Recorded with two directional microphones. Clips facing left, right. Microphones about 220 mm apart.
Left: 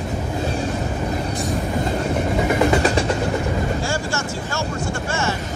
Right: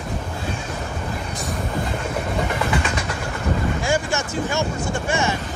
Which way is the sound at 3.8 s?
20° right (ahead or behind).